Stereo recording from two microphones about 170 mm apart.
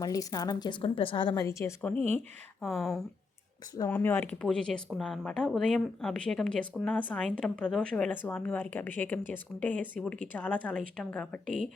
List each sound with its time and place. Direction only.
0.0 s a woman's voice: 20° left (ahead or behind)
2.6 s speech: centre (ahead or behind)
3.8 s a woman's voice: 10° left (ahead or behind)